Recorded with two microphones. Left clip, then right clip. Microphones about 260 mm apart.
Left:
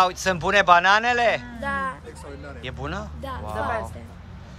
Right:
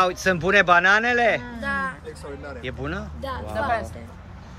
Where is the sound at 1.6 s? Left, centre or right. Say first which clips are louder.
Even; left.